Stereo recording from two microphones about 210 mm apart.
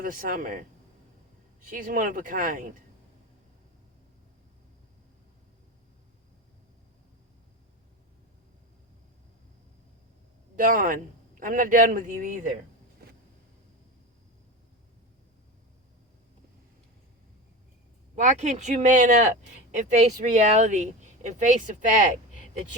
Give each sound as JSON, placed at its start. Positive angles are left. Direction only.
{"t": 0.0, "sound": "speech", "side_deg": -40}
{"t": 1.6, "sound": "speech", "side_deg": -40}
{"t": 10.5, "sound": "speech", "side_deg": -40}
{"t": 18.1, "sound": "speech", "side_deg": -35}